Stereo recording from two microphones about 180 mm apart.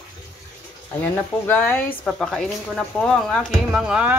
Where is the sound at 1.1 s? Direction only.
10° left (ahead or behind).